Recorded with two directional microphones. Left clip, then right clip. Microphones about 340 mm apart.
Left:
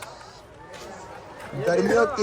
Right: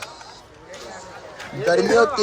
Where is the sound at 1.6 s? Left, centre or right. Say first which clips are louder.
Right 4 dB; right.